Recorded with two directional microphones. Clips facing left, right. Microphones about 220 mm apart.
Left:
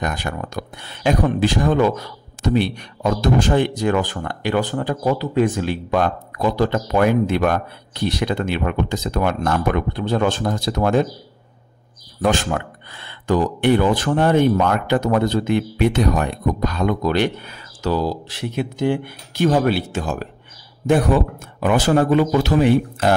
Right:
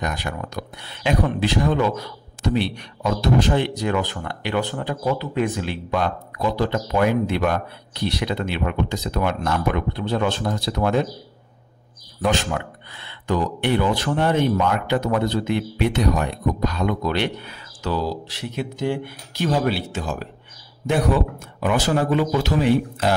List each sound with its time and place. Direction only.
0.0 s speech: 50° left (ahead or behind)
12.2 s speech: 45° left (ahead or behind)
18.6 s speech: 55° left (ahead or behind)
21.5 s speech: 50° left (ahead or behind)